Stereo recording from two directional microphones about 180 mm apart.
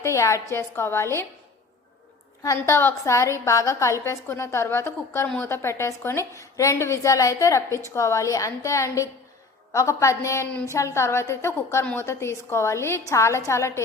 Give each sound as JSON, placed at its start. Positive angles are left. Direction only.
{"t": 0.0, "sound": "a woman's voice", "side_deg": 15}
{"t": 2.4, "sound": "a woman's voice", "side_deg": 15}